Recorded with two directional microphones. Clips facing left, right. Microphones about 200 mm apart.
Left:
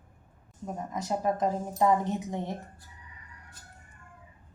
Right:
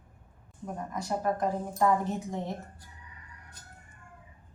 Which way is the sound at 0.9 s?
20° left (ahead or behind).